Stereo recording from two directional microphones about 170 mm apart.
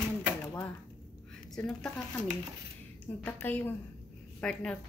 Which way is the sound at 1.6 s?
5° left (ahead or behind).